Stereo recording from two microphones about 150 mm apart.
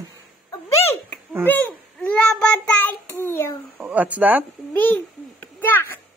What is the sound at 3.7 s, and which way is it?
Speech, 10° right (ahead or behind).